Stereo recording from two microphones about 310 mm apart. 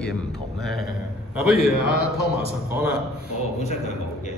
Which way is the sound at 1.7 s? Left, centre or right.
Left.